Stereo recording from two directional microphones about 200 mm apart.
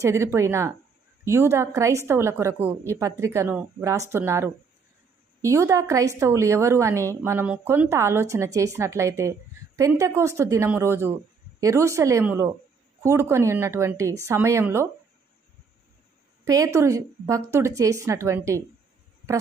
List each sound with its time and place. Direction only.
0.0 s a woman's voice: 15° right (ahead or behind)
16.4 s a woman's voice: 15° right (ahead or behind)